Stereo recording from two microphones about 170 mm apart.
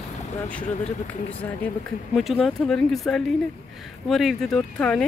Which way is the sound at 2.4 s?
Centre (ahead or behind).